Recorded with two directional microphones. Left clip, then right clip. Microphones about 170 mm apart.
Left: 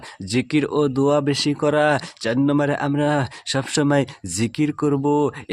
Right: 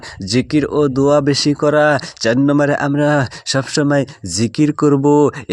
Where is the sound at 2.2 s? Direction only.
30° right (ahead or behind).